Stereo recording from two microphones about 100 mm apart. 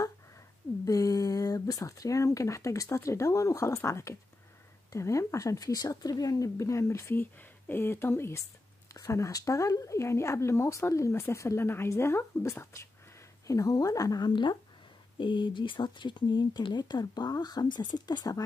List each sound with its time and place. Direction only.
0.8 s speech: 35° left (ahead or behind)